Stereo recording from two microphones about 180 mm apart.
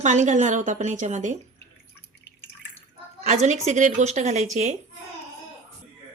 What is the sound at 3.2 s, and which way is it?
Speech, 40° right (ahead or behind).